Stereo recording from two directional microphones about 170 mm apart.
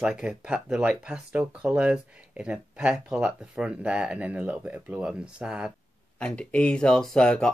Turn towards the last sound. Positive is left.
turn(degrees=5)  # may be behind; listen again after turning